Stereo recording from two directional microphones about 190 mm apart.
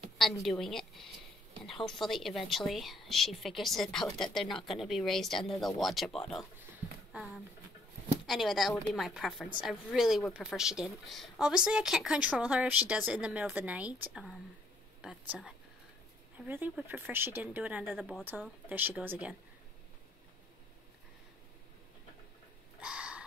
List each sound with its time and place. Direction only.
0.2 s speech: centre (ahead or behind)
8.3 s speech: centre (ahead or behind)
15.0 s a sound: 5° right (ahead or behind)
16.3 s speech: 10° right (ahead or behind)
22.8 s crow: 5° right (ahead or behind)